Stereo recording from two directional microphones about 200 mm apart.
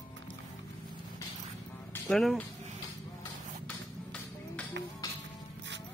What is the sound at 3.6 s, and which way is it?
Music, 5° left (ahead or behind).